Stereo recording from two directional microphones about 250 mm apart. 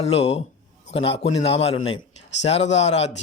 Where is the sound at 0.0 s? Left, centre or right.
Left.